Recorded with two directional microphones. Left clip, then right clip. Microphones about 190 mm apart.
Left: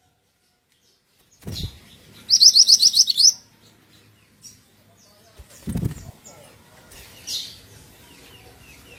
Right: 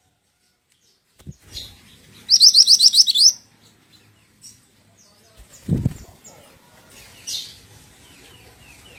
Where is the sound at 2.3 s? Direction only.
25° right (ahead or behind).